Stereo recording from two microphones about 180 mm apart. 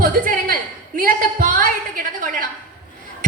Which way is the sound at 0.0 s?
50° right (ahead or behind).